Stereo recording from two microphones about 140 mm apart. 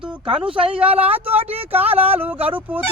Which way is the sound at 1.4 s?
45° right (ahead or behind).